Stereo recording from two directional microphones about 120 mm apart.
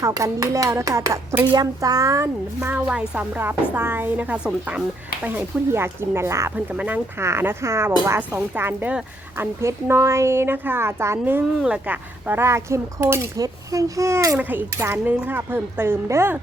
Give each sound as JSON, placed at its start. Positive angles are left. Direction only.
{"t": 0.0, "sound": "a woman's voice", "side_deg": -25}